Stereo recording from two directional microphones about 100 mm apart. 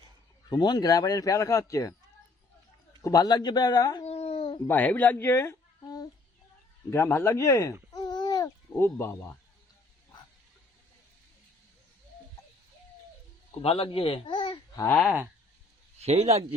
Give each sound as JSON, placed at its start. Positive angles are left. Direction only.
{"t": 0.5, "sound": "a man's voice", "side_deg": 45}
{"t": 3.0, "sound": "a man's voice", "side_deg": 40}
{"t": 4.0, "sound": "a sound", "side_deg": 85}
{"t": 4.7, "sound": "speech", "side_deg": 15}
{"t": 6.9, "sound": "speech", "side_deg": 25}
{"t": 7.9, "sound": "babbling", "side_deg": 45}
{"t": 8.7, "sound": "speech", "side_deg": 25}
{"t": 13.6, "sound": "speech", "side_deg": 70}
{"t": 16.0, "sound": "speech", "side_deg": -90}